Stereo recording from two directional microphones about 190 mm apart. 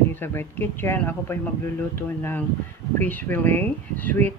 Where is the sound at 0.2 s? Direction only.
10° left (ahead or behind).